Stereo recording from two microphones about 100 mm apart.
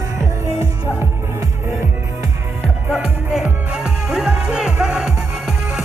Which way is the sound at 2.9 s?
5° right (ahead or behind).